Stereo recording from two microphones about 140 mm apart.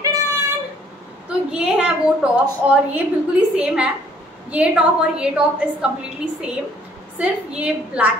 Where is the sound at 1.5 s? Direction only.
5° right (ahead or behind).